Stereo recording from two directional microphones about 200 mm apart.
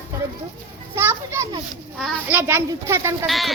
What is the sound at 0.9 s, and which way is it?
A child's voice, 10° right (ahead or behind).